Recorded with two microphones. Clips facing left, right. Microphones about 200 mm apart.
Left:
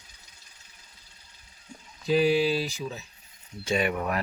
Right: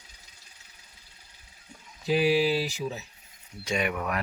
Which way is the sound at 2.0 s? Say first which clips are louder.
Left 1 dB; 10° right (ahead or behind).